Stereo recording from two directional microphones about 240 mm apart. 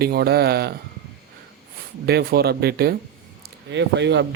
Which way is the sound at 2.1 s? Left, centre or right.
Right.